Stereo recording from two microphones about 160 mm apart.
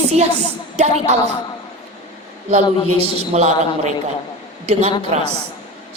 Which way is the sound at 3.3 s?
45° right (ahead or behind).